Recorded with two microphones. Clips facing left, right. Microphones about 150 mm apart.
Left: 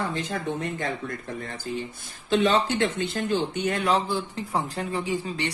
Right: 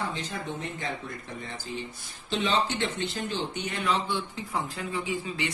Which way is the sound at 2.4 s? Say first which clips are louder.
Left 4 dB; 50° left (ahead or behind).